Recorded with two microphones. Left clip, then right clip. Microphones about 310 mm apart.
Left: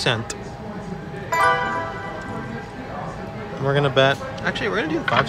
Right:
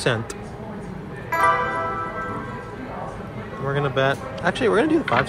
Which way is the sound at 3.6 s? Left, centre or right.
Centre.